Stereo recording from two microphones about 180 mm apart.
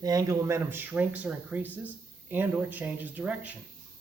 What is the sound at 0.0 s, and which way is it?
Speech, 20° right (ahead or behind).